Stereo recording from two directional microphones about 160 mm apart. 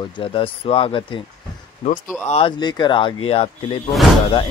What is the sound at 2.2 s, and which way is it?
Speech, 40° left (ahead or behind).